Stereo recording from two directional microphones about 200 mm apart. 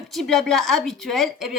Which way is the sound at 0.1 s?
Centre (ahead or behind).